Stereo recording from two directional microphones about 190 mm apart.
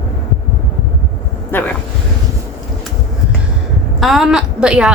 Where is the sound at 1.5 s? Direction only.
10° left (ahead or behind).